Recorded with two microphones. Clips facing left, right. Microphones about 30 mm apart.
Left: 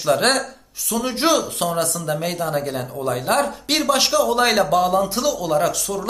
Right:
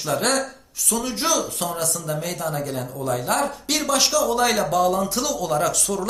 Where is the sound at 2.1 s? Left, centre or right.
Left.